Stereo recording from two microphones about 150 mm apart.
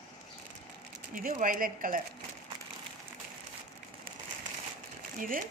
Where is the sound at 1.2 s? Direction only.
60° right (ahead or behind).